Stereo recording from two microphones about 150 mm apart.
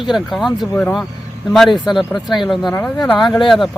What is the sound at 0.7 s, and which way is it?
Speech, 15° left (ahead or behind).